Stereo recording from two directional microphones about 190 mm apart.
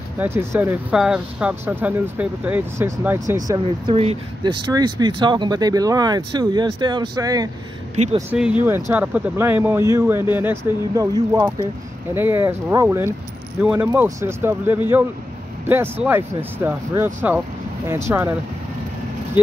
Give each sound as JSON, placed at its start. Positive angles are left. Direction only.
{"t": 0.2, "sound": "speech", "side_deg": -10}
{"t": 7.9, "sound": "speech", "side_deg": -35}
{"t": 8.3, "sound": "speech", "side_deg": -5}
{"t": 19.4, "sound": "speech", "side_deg": -10}